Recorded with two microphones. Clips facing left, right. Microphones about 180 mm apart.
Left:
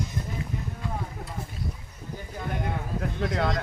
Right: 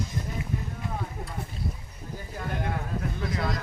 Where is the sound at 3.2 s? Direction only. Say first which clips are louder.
Left 6 dB; 75° left (ahead or behind).